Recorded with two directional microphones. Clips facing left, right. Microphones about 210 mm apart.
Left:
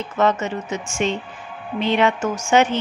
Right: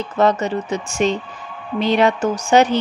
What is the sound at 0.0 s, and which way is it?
A woman's voice, 35° right (ahead or behind).